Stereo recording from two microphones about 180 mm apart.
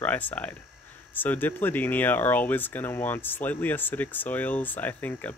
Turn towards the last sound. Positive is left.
turn(degrees=10)  # may be behind; listen again after turning